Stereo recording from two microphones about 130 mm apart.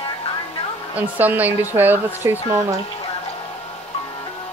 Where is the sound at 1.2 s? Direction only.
15° right (ahead or behind).